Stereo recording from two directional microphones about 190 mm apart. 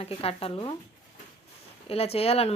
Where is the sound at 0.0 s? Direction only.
30° left (ahead or behind).